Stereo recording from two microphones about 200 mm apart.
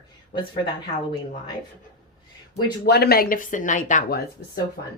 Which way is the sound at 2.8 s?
55° left (ahead or behind).